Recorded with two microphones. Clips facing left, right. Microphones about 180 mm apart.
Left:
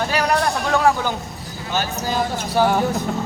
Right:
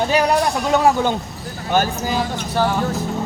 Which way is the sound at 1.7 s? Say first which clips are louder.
Right 6 dB; 55° right (ahead or behind).